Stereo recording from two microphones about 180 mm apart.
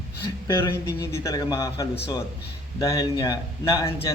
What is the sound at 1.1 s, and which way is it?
A man's voice, 15° left (ahead or behind).